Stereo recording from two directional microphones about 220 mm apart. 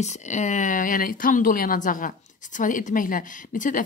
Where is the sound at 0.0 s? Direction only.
30° left (ahead or behind).